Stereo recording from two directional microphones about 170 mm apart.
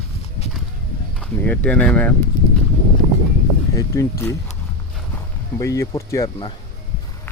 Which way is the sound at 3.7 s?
20° left (ahead or behind).